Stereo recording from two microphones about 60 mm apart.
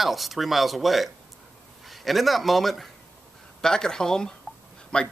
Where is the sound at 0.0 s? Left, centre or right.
Centre.